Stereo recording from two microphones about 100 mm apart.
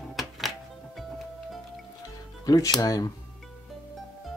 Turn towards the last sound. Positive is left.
turn(degrees=35)  # may be behind; listen again after turning